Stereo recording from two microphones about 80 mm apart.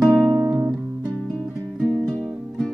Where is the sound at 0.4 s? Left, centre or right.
Right.